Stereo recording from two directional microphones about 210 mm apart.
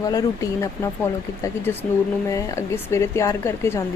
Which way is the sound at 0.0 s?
15° left (ahead or behind).